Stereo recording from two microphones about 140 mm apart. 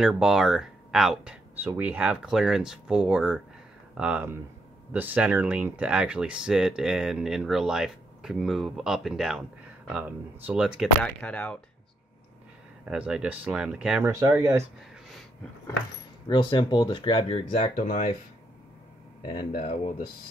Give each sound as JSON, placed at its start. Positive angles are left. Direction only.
{"t": 0.0, "sound": "speech", "side_deg": -5}
{"t": 10.8, "sound": "speech", "side_deg": 5}
{"t": 12.8, "sound": "speech", "side_deg": -10}
{"t": 14.0, "sound": "speech", "side_deg": -20}
{"t": 16.3, "sound": "speech", "side_deg": 35}
{"t": 17.7, "sound": "speech", "side_deg": 65}
{"t": 19.5, "sound": "speech", "side_deg": 55}